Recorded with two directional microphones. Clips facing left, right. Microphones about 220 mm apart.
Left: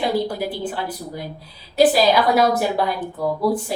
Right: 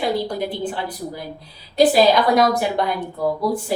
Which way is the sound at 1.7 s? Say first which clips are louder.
Right 1 dB; 5° left (ahead or behind).